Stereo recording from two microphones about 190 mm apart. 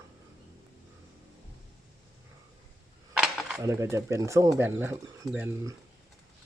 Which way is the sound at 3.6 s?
15° right (ahead or behind).